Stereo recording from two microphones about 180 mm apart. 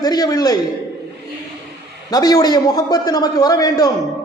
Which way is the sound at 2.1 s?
20° left (ahead or behind).